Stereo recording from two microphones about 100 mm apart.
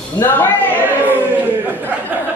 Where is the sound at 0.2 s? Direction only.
20° left (ahead or behind).